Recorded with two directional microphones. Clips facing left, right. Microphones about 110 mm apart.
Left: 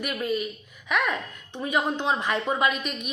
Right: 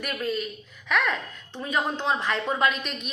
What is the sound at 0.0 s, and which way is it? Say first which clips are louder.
A woman's voice: left 1 dB; 10° left (ahead or behind).